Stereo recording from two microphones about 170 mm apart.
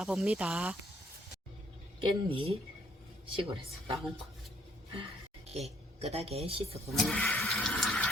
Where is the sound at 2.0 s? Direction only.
30° right (ahead or behind).